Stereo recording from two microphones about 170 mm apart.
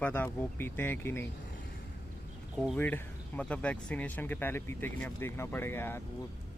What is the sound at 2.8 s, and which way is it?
Speech, 10° left (ahead or behind).